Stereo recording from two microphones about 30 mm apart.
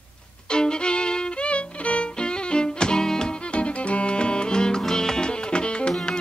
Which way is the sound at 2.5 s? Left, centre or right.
Left.